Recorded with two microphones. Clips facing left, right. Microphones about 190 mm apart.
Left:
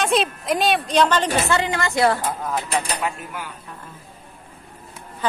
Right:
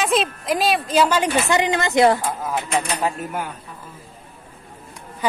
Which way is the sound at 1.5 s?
20° right (ahead or behind).